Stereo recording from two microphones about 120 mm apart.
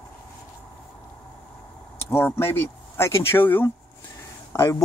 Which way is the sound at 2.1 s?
20° left (ahead or behind).